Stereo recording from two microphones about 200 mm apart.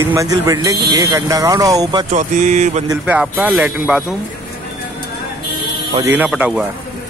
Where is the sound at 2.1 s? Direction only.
35° right (ahead or behind).